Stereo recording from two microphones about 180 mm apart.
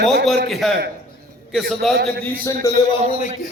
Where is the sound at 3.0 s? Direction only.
30° right (ahead or behind).